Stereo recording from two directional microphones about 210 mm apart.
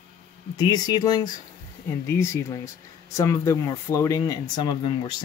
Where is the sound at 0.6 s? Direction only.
20° left (ahead or behind).